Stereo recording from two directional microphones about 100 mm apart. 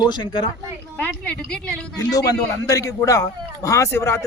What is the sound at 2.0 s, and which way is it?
A man's voice, 35° left (ahead or behind).